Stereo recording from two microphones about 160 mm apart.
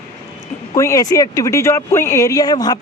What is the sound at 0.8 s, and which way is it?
Speech, 20° left (ahead or behind).